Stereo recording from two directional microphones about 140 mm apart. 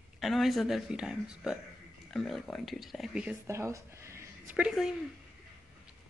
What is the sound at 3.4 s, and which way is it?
Speech, 20° right (ahead or behind).